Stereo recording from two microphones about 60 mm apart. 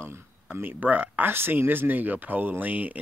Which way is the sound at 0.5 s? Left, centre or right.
Right.